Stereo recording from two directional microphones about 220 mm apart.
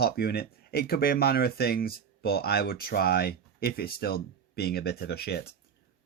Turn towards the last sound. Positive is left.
turn(degrees=45)  # may be behind; listen again after turning